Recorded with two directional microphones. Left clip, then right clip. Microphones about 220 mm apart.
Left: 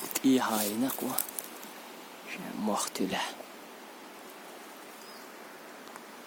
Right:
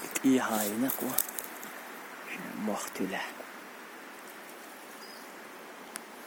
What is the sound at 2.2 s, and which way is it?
Speech, 20° left (ahead or behind).